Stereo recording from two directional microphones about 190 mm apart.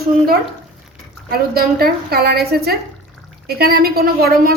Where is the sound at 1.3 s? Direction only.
55° right (ahead or behind).